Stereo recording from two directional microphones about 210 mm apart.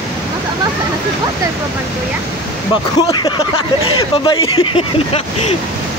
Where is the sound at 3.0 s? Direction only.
20° left (ahead or behind).